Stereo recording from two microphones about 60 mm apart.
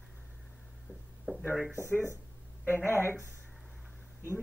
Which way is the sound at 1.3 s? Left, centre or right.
Right.